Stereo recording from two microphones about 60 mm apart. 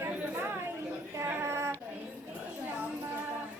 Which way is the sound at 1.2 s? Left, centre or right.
Right.